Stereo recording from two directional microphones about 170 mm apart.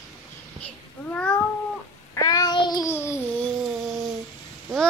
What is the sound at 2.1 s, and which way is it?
Child singing, 20° left (ahead or behind).